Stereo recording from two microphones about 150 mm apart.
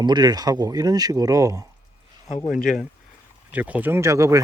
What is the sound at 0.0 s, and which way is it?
Speech, 30° right (ahead or behind).